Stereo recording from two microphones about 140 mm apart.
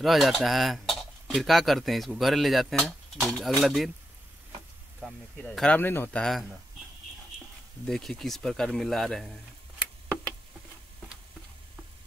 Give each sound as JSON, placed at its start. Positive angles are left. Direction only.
{"t": 0.0, "sound": "speech", "side_deg": 0}
{"t": 5.0, "sound": "speech", "side_deg": 5}
{"t": 7.8, "sound": "speech", "side_deg": 5}